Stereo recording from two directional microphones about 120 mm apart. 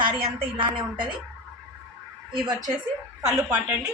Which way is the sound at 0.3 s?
45° right (ahead or behind).